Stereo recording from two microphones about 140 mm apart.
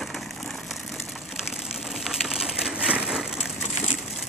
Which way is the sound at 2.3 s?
5° right (ahead or behind).